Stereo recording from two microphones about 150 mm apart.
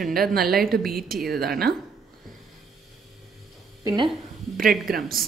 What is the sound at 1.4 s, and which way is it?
Speech, 90° right.